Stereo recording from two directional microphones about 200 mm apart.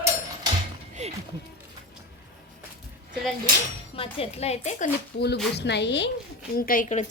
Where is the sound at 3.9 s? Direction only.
30° left (ahead or behind).